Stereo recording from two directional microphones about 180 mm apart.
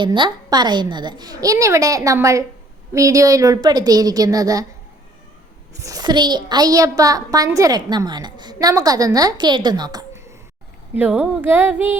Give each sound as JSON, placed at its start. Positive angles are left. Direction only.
{"t": 0.0, "sound": "a woman's voice", "side_deg": -25}
{"t": 5.8, "sound": "a woman's voice", "side_deg": -20}
{"t": 10.9, "sound": "speech", "side_deg": -10}